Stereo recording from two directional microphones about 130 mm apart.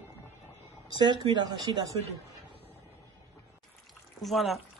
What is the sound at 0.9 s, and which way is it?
Speech, 35° right (ahead or behind).